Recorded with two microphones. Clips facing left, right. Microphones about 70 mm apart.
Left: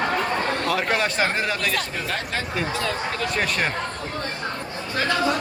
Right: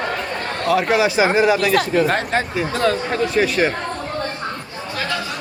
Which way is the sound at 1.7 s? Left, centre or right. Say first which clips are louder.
Right 10 dB; right.